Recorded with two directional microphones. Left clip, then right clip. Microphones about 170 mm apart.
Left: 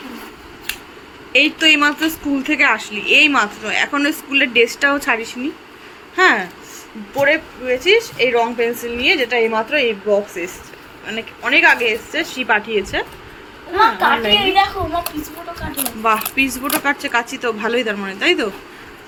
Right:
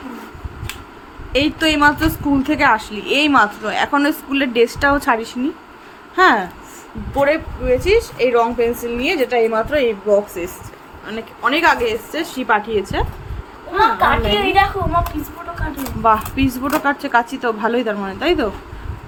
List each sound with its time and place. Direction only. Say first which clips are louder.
1.3 s a woman's voice: left 4 dB; 25° right (ahead or behind)
7.2 s a woman's voice: left 1 dB; 15° right (ahead or behind)
16.0 s a woman's voice: right 1 dB; 20° right (ahead or behind)